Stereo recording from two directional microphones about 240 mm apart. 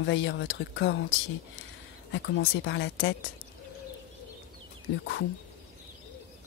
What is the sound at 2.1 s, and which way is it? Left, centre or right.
A woman's voice, left.